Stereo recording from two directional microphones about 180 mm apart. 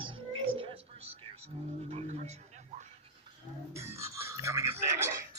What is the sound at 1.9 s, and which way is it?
Music, 35° right (ahead or behind).